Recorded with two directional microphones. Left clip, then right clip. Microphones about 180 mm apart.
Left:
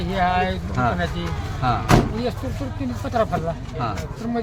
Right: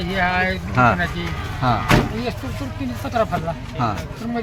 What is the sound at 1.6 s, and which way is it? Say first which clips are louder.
Speech: right 2 dB; 60° right (ahead or behind).